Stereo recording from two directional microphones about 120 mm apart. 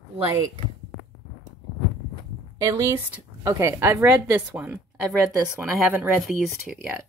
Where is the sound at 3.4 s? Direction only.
25° right (ahead or behind); by 6.8 s 5° right (ahead or behind).